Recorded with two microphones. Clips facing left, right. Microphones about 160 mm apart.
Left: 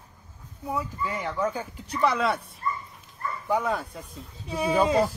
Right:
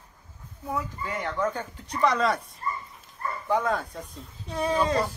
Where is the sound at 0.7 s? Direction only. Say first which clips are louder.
Left 1 dB; 10° left (ahead or behind).